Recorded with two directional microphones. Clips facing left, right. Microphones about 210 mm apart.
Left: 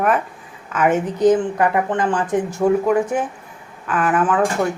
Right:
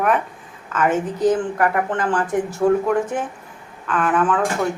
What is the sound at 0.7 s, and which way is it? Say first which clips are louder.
A woman's voice: left 2 dB; 15° left (ahead or behind).